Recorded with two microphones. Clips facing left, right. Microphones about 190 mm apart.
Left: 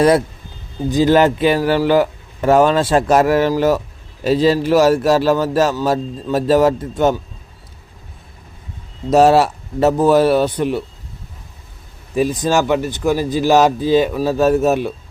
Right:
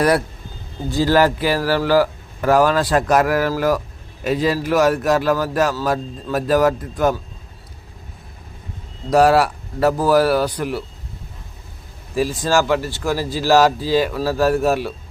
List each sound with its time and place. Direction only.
0.9 s speech: 20° left (ahead or behind)
9.0 s speech: 25° left (ahead or behind)
12.1 s speech: 20° left (ahead or behind)